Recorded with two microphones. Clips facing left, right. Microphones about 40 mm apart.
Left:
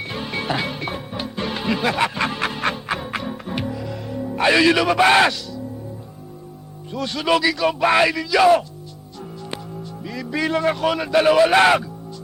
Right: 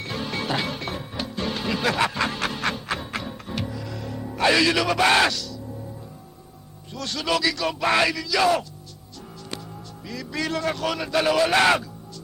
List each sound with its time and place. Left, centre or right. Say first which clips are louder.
0.0 s music: left 2 dB; centre
4.4 s speech: left 4 dB; centre
6.9 s a man's voice: left 5 dB; centre
10.0 s a man's voice: left 5 dB; centre